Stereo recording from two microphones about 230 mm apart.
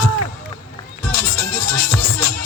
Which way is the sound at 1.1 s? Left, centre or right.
Left.